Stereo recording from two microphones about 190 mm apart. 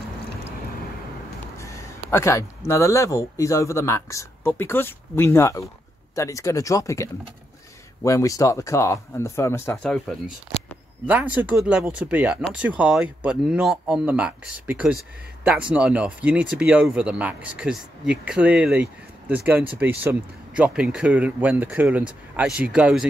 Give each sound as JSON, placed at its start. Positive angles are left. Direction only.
{"t": 1.6, "sound": "speech", "side_deg": 15}
{"t": 11.1, "sound": "speech", "side_deg": -5}